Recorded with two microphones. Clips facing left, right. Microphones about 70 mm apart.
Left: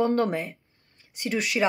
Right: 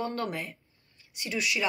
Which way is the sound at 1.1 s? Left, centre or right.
Left.